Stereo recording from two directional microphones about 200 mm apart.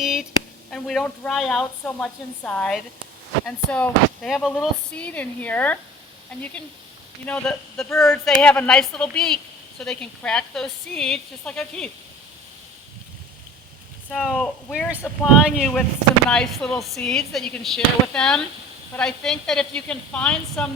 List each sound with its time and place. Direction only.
0.0 s a sound: 5° right (ahead or behind)
0.7 s a woman's voice: centre (ahead or behind)
7.3 s a woman's voice: 5° left (ahead or behind)
14.1 s a woman's voice: centre (ahead or behind)